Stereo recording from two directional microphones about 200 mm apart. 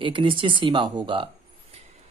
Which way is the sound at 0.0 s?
25° right (ahead or behind).